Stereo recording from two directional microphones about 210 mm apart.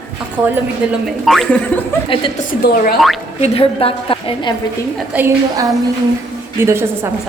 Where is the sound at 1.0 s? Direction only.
Centre (ahead or behind).